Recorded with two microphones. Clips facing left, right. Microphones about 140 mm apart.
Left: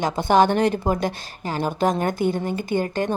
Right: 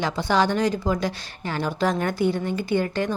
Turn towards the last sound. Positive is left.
turn(degrees=45)  # may be behind; listen again after turning